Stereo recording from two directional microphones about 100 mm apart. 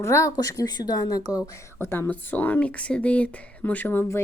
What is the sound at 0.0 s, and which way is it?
A woman's voice, 30° left (ahead or behind).